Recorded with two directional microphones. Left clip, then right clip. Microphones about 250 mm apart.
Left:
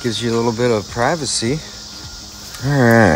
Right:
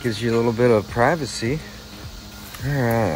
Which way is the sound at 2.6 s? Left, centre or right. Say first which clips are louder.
Left 9 dB; left.